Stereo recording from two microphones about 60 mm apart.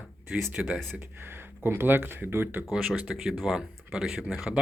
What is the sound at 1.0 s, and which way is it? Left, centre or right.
Speech, right.